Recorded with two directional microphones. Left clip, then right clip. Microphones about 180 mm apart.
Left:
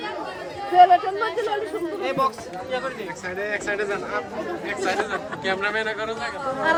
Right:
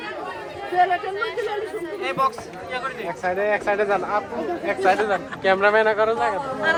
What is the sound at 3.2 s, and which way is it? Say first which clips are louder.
Speech: right 7 dB; 15° right (ahead or behind).